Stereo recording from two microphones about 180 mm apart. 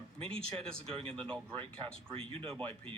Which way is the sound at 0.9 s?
30° right (ahead or behind).